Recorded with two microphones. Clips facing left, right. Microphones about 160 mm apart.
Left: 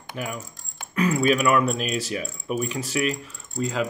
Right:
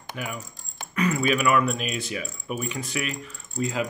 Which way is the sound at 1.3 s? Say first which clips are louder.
Left 2 dB; centre (ahead or behind).